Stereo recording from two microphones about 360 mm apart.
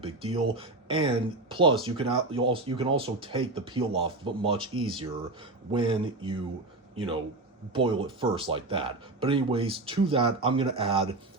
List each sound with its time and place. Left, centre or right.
0.0 s speech: centre
5.7 s a man's voice: centre